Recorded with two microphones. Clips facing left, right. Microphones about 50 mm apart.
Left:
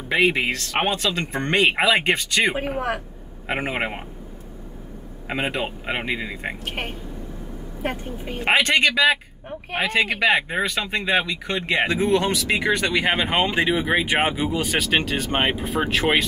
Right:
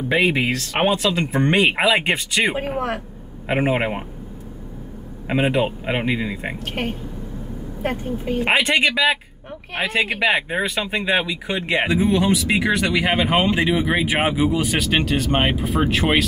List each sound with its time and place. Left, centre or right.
0.1 s speech: centre
5.3 s speech: centre
6.6 s speech: centre
7.8 s speech: centre